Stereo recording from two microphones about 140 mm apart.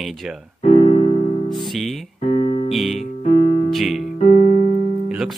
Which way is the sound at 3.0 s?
55° left (ahead or behind).